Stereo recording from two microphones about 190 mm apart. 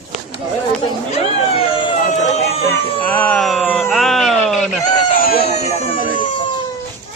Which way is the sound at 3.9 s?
Centre (ahead or behind).